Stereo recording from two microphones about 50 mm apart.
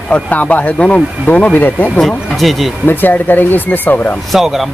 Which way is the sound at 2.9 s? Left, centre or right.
Left.